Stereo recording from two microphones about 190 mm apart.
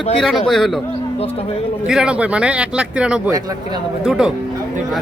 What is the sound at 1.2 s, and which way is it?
Speech, 30° left (ahead or behind).